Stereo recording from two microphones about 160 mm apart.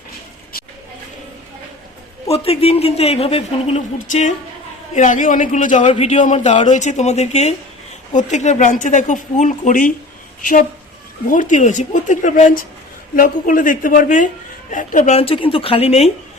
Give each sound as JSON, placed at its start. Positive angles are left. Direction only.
{"t": 2.2, "sound": "a woman's voice", "side_deg": 40}
{"t": 11.3, "sound": "a woman's voice", "side_deg": 50}